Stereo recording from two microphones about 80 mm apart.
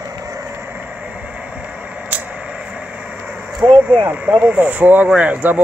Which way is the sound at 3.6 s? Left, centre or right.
Right.